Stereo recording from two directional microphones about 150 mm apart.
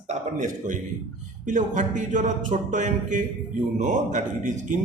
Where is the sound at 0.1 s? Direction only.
55° right (ahead or behind).